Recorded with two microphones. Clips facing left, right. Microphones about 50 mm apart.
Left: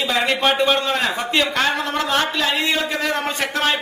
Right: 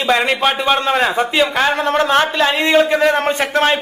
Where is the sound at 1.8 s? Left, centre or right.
Right.